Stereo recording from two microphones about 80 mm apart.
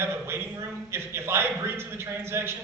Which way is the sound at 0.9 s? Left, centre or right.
Right.